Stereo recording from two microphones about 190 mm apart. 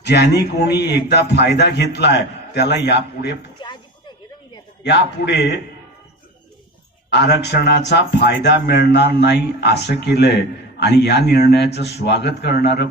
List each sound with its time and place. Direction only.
0.0 s speech: 60° left (ahead or behind)
4.8 s speech: 65° left (ahead or behind)
7.1 s speech: 60° left (ahead or behind)